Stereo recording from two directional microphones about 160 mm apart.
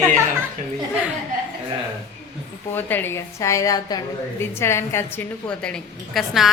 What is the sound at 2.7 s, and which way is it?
A woman's voice, 15° left (ahead or behind).